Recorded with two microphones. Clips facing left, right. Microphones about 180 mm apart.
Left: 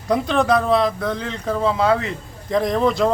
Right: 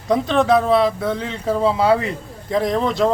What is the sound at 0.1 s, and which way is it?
Speech, centre (ahead or behind).